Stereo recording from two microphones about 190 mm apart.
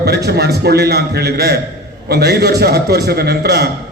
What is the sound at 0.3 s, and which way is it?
A man's voice, 60° right (ahead or behind).